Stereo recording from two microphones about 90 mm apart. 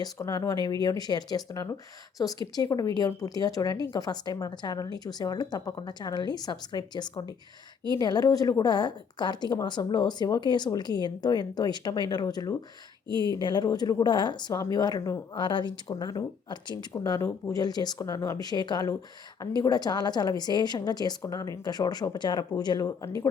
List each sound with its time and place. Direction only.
0.0 s a woman's voice: 45° left (ahead or behind)
13.1 s speech: 55° right (ahead or behind)
13.4 s a woman's voice: 50° left (ahead or behind)
14.5 s a woman's voice: 40° left (ahead or behind)
15.4 s speech: 60° left (ahead or behind)
16.9 s a woman's voice: 40° left (ahead or behind)